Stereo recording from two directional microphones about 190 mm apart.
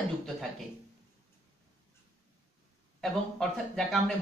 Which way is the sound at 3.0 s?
5° left (ahead or behind).